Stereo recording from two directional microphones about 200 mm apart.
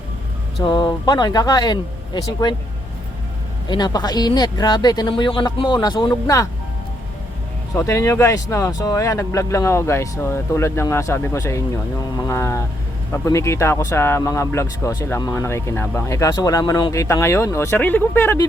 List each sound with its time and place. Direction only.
0.6 s speech: 20° left (ahead or behind)
3.7 s speech: 20° left (ahead or behind)
7.8 s speech: 15° left (ahead or behind)